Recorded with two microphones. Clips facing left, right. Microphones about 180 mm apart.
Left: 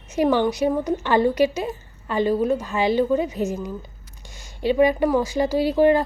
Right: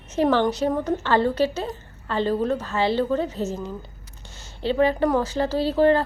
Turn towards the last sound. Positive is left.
turn(degrees=15)  # may be behind; listen again after turning